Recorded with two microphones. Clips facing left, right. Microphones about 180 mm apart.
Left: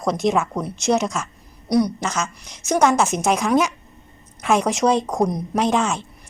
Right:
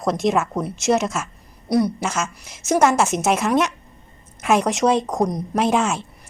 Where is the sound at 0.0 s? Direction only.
Centre (ahead or behind).